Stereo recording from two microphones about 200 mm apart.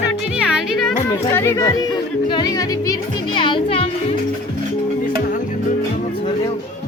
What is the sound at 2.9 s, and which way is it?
Speech, 25° left (ahead or behind).